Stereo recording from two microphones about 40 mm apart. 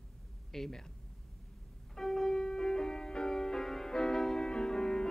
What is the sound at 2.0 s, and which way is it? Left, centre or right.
Music, centre.